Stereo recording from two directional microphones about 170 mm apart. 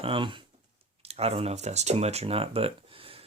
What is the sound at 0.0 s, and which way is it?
Speech, 30° right (ahead or behind).